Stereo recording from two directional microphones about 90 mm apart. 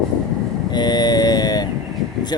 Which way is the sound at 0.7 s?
50° left (ahead or behind).